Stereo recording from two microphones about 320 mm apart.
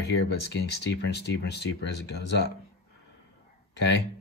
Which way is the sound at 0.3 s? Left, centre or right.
Left.